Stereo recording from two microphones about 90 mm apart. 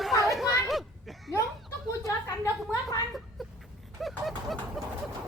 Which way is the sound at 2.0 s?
35° left (ahead or behind).